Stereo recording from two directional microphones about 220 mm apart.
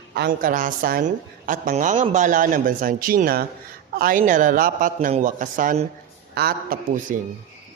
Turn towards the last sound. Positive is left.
turn(degrees=-40)  # may be behind; listen again after turning